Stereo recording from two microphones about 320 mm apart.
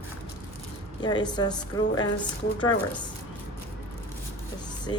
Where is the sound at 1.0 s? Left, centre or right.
Centre.